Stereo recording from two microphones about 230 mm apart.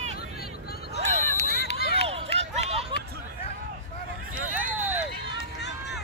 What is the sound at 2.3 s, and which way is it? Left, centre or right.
Run, right.